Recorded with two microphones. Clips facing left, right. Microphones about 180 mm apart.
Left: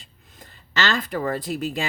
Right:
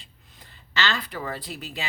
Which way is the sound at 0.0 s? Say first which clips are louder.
Left 4 dB; 45° left (ahead or behind).